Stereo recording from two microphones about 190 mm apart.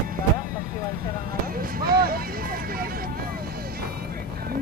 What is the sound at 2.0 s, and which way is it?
Vehicle, 50° right (ahead or behind).